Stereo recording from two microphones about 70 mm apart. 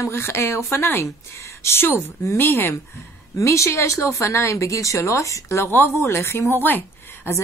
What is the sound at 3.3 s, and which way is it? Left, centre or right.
Speech, left.